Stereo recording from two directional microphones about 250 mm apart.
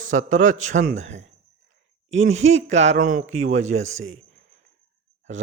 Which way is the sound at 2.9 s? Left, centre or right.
Right.